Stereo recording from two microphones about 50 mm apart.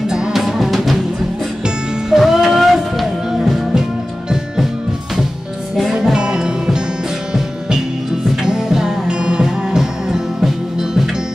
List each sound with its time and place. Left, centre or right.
0.1 s music: centre
2.0 s music: centre
5.8 s music: centre
8.4 s music: centre